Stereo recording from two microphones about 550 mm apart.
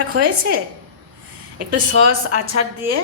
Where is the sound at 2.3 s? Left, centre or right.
Right.